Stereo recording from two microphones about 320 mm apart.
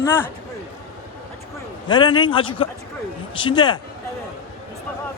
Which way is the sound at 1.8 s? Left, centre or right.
Centre.